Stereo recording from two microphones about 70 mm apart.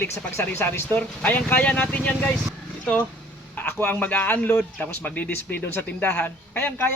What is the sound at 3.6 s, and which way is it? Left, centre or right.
A man's voice, left.